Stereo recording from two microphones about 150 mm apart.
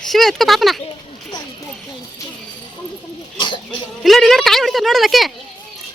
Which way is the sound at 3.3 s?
30° left (ahead or behind).